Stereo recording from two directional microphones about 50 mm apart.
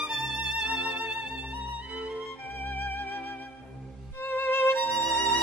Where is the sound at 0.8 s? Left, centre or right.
Right.